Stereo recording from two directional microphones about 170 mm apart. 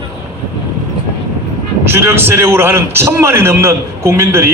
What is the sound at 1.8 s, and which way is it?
A man's voice, 15° right (ahead or behind).